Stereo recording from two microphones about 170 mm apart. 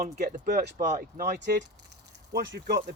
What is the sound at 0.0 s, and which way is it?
Speech, 60° right (ahead or behind).